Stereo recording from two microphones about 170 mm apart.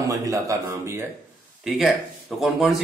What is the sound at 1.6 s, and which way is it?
Speech, centre (ahead or behind).